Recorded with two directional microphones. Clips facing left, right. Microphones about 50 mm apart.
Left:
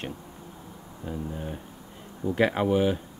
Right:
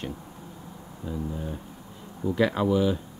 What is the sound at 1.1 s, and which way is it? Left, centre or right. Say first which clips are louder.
Speech: right 1 dB; left.